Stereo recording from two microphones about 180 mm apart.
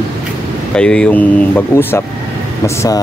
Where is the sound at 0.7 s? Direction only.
5° left (ahead or behind).